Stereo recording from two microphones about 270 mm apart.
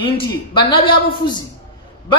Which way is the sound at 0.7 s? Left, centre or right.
Centre.